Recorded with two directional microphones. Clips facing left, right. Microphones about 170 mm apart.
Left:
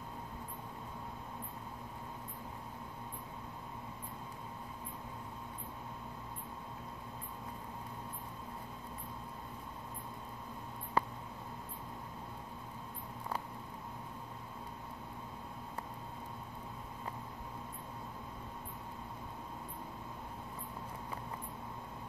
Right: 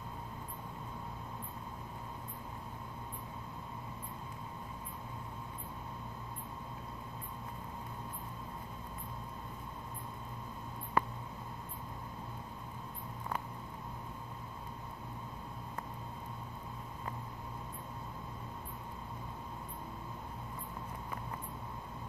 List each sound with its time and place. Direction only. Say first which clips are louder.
11.0 s mouse: right 1 dB; 35° left (ahead or behind)